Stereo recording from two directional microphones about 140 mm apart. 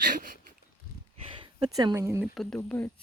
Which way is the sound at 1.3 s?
35° right (ahead or behind).